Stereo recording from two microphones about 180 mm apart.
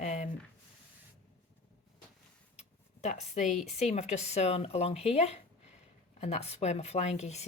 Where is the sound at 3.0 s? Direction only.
40° left (ahead or behind).